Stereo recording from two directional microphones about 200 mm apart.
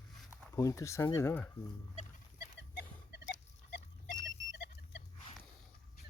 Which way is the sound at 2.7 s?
55° left (ahead or behind).